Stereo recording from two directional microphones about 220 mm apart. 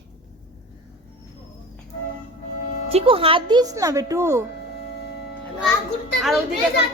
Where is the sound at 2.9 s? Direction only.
25° right (ahead or behind).